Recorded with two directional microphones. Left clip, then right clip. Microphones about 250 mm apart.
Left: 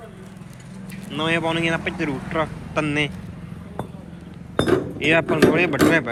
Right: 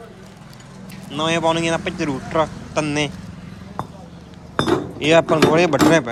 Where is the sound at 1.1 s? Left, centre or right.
Centre.